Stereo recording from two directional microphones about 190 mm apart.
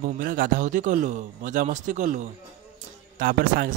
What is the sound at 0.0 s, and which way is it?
A man's voice, 45° right (ahead or behind).